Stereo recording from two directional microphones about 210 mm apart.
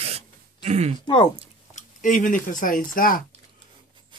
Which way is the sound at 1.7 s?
40° left (ahead or behind).